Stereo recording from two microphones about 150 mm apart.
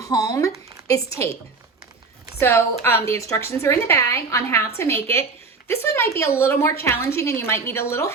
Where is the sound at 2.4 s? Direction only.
15° left (ahead or behind).